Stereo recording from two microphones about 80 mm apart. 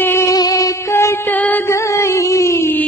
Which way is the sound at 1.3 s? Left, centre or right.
Left.